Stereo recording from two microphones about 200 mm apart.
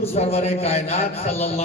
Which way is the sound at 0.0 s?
30° left (ahead or behind).